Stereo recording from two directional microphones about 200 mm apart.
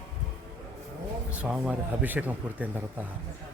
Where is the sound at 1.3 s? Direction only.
5° right (ahead or behind).